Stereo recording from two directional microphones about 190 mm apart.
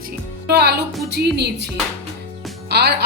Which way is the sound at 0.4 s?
60° right (ahead or behind).